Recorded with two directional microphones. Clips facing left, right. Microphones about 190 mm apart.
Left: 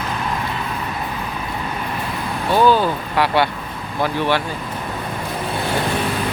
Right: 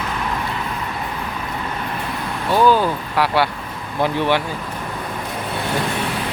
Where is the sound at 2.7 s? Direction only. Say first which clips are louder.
Even; 5° right (ahead or behind).